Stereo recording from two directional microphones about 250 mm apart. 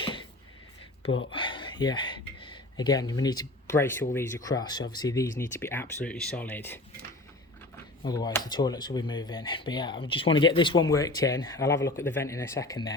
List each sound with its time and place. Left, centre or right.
0.0 s a sound: centre
1.2 s speech: left
8.0 s speech: centre